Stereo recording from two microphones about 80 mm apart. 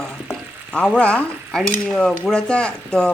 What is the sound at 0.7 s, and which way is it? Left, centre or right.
Stir, centre.